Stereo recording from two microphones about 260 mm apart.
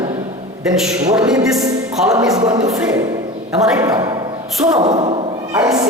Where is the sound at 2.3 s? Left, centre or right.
Centre.